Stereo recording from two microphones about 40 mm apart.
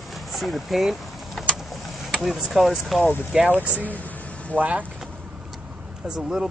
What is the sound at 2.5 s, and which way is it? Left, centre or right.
Speech, centre.